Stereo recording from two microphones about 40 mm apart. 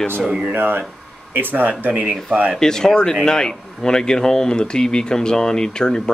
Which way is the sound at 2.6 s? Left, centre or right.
Centre.